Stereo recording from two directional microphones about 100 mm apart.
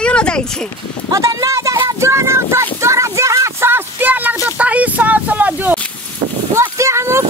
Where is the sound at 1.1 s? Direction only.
35° right (ahead or behind).